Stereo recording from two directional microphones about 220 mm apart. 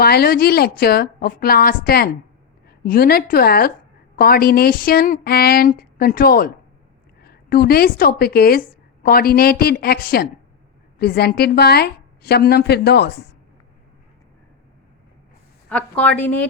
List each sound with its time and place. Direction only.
0.0 s a woman's voice: 45° left (ahead or behind)
15.7 s a woman's voice: 5° left (ahead or behind)